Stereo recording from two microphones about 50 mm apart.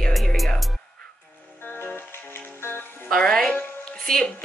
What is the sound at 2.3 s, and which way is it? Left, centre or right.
Music, left.